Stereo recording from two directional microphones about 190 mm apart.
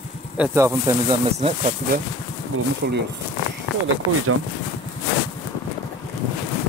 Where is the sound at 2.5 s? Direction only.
90° right.